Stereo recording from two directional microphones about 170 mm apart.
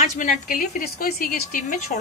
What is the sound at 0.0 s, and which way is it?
A woman's voice, 50° left (ahead or behind).